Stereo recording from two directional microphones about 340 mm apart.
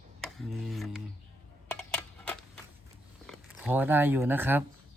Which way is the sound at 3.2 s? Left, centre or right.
Centre.